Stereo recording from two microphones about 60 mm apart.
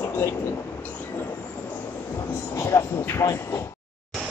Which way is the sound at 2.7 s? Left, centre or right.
Left.